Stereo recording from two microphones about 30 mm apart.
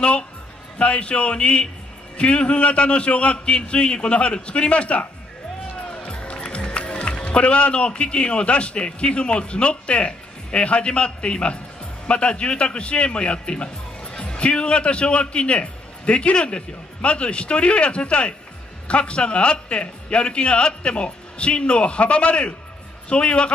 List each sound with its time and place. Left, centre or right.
0.7 s a man's voice: left